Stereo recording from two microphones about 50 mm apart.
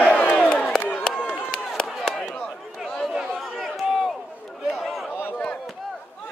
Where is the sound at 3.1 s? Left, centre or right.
Centre.